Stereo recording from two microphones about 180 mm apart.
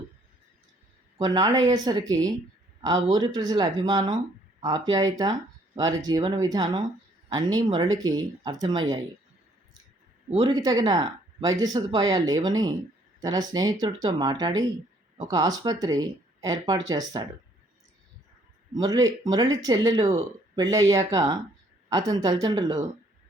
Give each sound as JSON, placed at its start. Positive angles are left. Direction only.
{"t": 1.2, "sound": "speech", "side_deg": -20}
{"t": 10.4, "sound": "speech", "side_deg": -20}
{"t": 18.7, "sound": "speech", "side_deg": -20}